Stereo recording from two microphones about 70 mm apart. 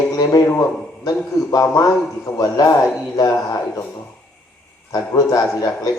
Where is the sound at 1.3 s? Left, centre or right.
Left.